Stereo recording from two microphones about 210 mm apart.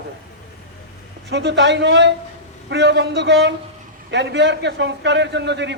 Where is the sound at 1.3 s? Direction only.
55° right (ahead or behind).